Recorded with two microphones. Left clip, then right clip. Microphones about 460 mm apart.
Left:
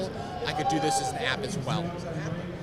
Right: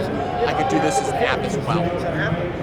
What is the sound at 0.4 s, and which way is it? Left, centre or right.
Speech, left.